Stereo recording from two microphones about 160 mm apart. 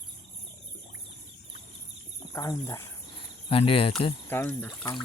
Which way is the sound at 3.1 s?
35° left (ahead or behind).